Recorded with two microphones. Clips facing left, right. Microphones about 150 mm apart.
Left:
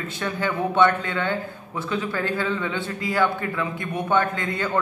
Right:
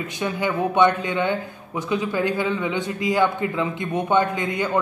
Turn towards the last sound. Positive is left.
turn(degrees=-15)  # may be behind; listen again after turning